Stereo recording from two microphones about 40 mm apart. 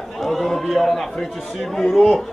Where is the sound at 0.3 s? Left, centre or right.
Centre.